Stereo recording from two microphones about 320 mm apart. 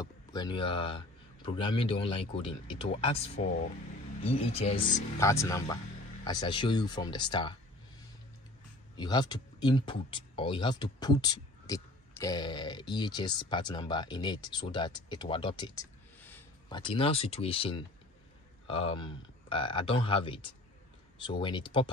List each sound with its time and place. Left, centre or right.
0.0 s speech: centre
8.9 s speech: centre